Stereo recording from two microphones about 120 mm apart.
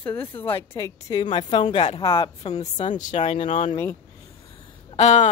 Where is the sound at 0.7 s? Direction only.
25° left (ahead or behind).